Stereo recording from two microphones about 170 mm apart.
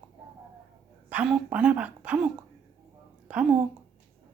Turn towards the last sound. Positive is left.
turn(degrees=-5)  # may be behind; listen again after turning